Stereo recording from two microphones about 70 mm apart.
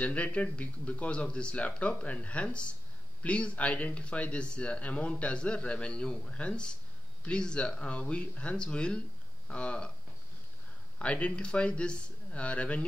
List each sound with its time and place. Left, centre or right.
0.0 s speech: centre
11.0 s speech: centre